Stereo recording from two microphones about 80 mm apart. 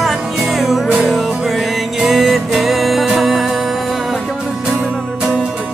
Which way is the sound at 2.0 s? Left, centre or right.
Centre.